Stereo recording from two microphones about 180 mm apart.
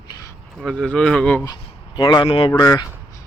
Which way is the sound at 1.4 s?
20° left (ahead or behind).